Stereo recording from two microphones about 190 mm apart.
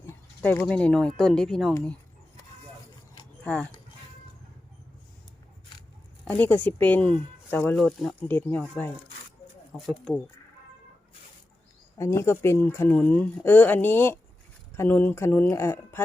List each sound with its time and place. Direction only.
0.0 s speech: 10° left (ahead or behind)
3.4 s speech: 5° left (ahead or behind)
6.2 s speech: 10° left (ahead or behind)
9.7 s speech: centre (ahead or behind)
11.9 s speech: 15° left (ahead or behind)